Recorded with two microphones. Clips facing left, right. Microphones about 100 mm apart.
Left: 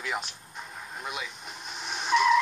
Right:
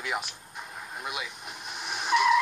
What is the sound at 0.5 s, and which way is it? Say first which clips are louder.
Vehicle: right 1 dB; 5° right (ahead or behind).